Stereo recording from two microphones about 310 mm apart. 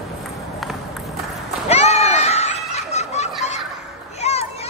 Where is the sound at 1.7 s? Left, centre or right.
Centre.